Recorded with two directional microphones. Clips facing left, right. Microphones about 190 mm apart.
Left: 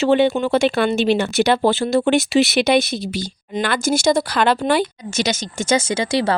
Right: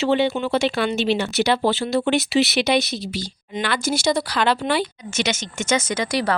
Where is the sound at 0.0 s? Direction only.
50° left (ahead or behind).